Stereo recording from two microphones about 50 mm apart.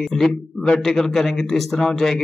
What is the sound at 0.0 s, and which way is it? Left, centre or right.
A man's voice, centre.